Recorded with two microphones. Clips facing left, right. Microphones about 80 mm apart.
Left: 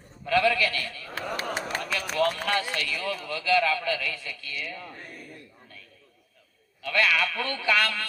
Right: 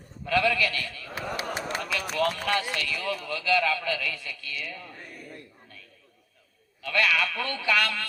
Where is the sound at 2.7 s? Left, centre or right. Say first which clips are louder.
Even; left.